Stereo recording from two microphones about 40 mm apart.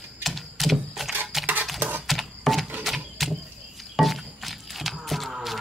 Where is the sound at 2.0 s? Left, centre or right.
Centre.